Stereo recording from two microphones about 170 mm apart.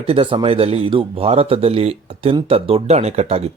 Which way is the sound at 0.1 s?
30° right (ahead or behind).